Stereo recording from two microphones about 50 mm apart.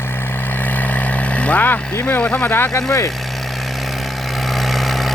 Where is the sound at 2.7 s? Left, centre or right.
Left.